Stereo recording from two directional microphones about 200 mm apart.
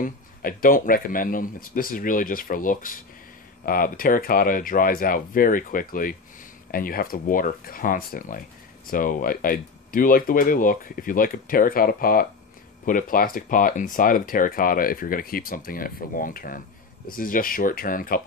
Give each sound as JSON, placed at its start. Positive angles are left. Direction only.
{"t": 0.0, "sound": "speech", "side_deg": 45}